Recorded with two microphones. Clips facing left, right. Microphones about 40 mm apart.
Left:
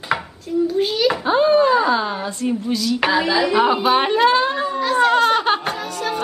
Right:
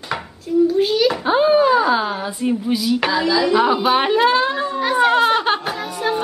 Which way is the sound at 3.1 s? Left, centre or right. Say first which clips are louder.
Left 2 dB; left.